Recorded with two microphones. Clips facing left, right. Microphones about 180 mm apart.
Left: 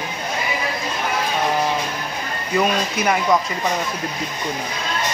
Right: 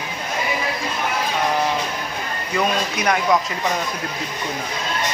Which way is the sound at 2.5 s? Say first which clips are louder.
Left 2 dB; 5° left (ahead or behind).